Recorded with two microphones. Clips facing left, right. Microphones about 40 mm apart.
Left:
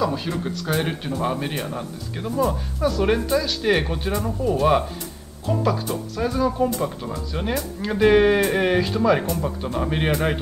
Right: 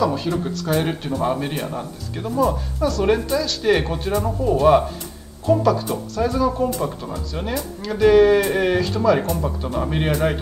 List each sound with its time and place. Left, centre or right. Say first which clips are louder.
0.0 s speech: right 3 dB; centre
7.5 s speech: even; left
8.4 s speech: right 1 dB; centre